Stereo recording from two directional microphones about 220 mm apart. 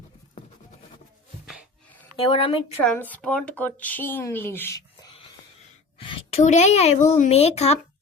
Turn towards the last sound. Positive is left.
turn(degrees=30)  # may be behind; listen again after turning